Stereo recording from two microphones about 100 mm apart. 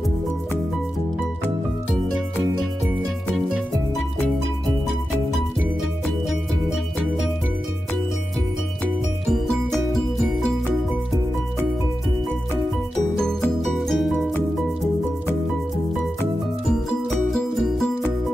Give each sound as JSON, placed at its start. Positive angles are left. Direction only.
{"t": 6.0, "sound": "music", "side_deg": 0}
{"t": 9.3, "sound": "music", "side_deg": 5}
{"t": 13.6, "sound": "music", "side_deg": 0}
{"t": 17.3, "sound": "music", "side_deg": 5}